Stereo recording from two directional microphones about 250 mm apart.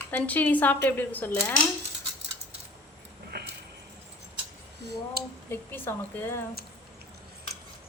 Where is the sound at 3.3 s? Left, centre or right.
Right.